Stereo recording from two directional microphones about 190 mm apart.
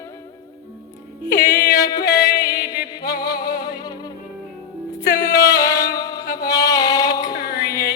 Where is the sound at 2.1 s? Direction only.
55° left (ahead or behind).